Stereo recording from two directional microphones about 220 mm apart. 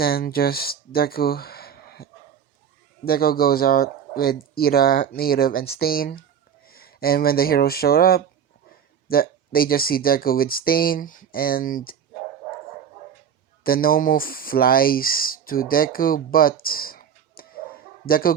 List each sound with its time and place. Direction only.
0.0 s speech: 45° left (ahead or behind)
13.7 s speech: 40° left (ahead or behind)